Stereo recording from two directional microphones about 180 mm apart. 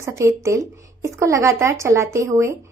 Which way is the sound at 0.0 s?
15° right (ahead or behind).